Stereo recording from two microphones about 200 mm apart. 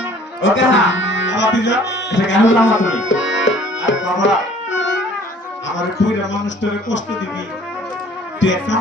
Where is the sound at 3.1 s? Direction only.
65° left (ahead or behind).